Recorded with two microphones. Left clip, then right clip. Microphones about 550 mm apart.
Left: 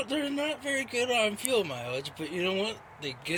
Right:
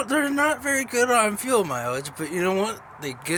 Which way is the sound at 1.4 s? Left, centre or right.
Left.